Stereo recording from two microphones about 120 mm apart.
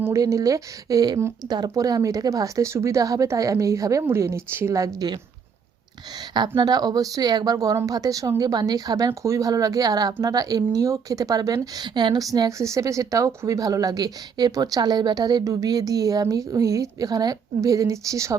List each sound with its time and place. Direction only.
0.0 s speech: 25° right (ahead or behind)
6.6 s speech: 35° right (ahead or behind)